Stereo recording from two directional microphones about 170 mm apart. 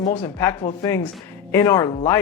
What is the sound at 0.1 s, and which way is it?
Speech, 15° left (ahead or behind).